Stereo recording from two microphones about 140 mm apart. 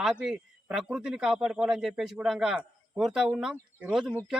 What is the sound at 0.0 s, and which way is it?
Speech, 5° right (ahead or behind).